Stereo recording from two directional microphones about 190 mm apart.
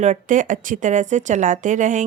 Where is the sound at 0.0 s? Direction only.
40° right (ahead or behind).